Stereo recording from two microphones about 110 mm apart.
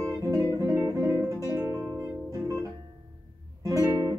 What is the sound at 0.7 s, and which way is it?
Music, 30° right (ahead or behind).